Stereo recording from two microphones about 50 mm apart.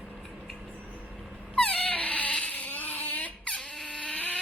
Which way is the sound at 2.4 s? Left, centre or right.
Left.